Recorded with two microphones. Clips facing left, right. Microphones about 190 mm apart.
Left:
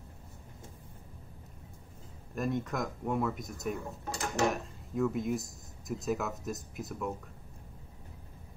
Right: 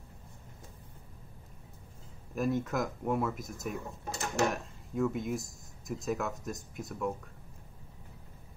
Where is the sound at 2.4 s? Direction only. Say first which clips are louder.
Right 2 dB; centre (ahead or behind).